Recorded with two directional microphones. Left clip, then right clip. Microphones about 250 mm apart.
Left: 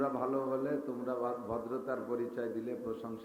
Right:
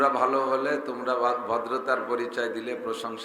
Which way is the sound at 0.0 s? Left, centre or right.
Centre.